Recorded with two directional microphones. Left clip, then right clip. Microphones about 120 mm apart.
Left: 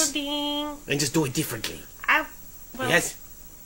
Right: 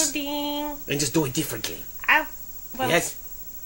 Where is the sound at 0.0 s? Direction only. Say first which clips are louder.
Even; 10° right (ahead or behind).